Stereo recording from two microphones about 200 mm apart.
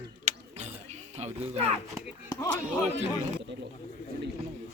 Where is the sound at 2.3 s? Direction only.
15° left (ahead or behind).